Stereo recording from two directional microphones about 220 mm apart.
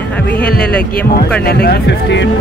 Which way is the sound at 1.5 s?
45° left (ahead or behind).